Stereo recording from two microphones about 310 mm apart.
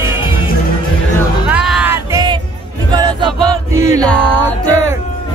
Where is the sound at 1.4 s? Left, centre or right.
Centre.